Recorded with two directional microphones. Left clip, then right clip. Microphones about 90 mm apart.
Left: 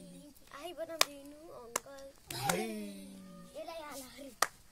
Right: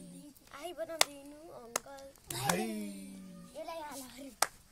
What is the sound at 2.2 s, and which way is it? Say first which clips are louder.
Music: right 1 dB; 15° right (ahead or behind).